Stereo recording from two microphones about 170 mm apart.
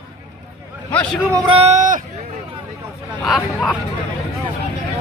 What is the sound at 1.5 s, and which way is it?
Speech, 40° right (ahead or behind).